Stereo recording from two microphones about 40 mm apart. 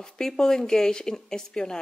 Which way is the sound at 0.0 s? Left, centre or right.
Centre.